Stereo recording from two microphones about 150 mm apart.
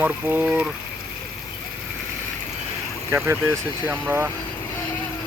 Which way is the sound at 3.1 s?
15° right (ahead or behind).